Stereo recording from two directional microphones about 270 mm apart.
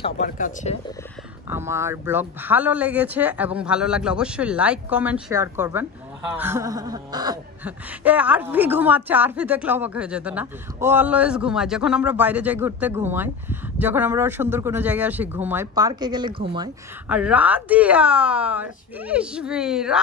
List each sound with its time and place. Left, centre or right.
0.0 s speech: left
1.5 s speech: centre
17.1 s speech: centre